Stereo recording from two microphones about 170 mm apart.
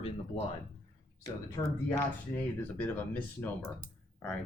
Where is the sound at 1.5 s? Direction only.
15° left (ahead or behind).